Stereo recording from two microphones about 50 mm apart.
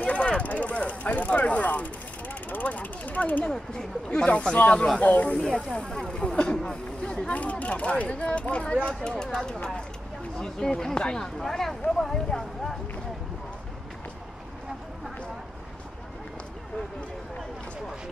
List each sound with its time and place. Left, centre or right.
0.0 s a sound: left
0.4 s speech: left
4.1 s speech: left
5.5 s speech: centre